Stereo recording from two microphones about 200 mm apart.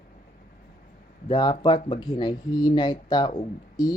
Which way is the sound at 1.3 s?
20° left (ahead or behind).